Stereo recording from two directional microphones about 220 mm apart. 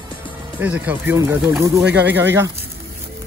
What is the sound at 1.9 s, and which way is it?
Speech, 50° right (ahead or behind).